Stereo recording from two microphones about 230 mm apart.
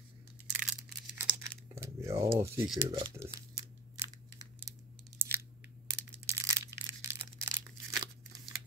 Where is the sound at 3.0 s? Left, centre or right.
Centre.